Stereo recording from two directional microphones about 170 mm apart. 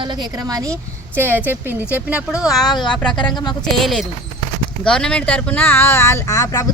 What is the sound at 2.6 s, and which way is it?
Speech, 25° left (ahead or behind).